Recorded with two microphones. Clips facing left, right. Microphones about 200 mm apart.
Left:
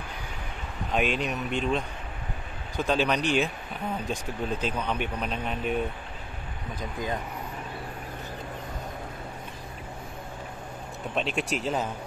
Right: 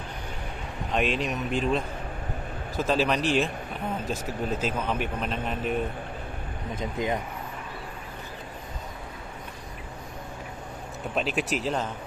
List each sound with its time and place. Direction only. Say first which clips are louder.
0.9 s speech: even; centre (ahead or behind)
6.7 s speech: right 4 dB; 20° right (ahead or behind)
11.1 s speech: right 1 dB; centre (ahead or behind)